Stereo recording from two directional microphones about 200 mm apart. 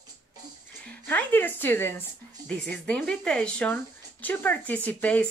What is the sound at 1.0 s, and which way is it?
Speech, 10° left (ahead or behind).